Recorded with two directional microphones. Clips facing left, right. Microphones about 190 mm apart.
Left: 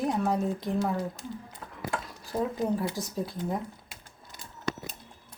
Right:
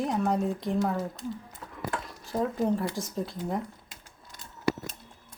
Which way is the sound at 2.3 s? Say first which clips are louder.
Right 1 dB; centre (ahead or behind).